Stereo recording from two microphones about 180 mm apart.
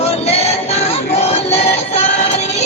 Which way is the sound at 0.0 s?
35° left (ahead or behind).